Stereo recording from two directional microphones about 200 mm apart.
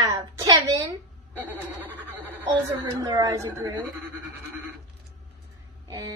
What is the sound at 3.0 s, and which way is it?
Speech, 20° right (ahead or behind).